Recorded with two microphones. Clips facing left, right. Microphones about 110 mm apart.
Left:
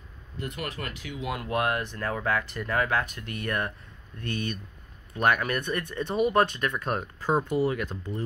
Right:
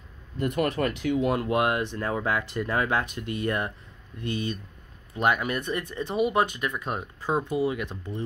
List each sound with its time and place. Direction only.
0.4 s speech: 40° right (ahead or behind)
1.3 s speech: 25° right (ahead or behind)